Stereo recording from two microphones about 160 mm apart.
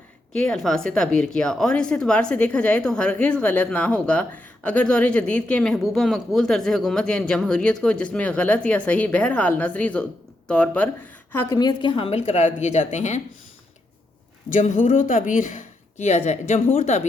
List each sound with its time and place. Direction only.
0.3 s a woman's voice: 5° left (ahead or behind)
11.4 s speech: 25° left (ahead or behind); by 13.2 s 45° left (ahead or behind)
14.5 s speech: 55° left (ahead or behind)